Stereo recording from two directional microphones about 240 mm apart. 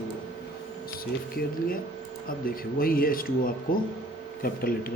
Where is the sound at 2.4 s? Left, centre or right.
Left.